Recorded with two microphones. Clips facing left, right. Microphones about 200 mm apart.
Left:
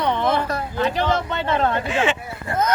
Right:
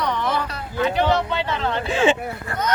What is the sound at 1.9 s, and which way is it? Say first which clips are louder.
Speech: right 3 dB; 30° right (ahead or behind).